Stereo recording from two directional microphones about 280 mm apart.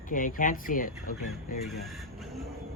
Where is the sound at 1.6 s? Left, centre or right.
Centre.